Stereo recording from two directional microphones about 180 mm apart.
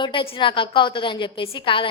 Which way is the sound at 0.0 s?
30° left (ahead or behind).